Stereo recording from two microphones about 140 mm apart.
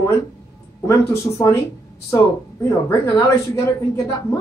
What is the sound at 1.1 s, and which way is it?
Speech, 20° left (ahead or behind).